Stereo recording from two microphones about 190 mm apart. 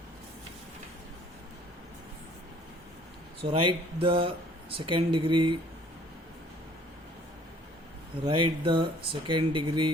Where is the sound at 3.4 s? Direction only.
25° right (ahead or behind).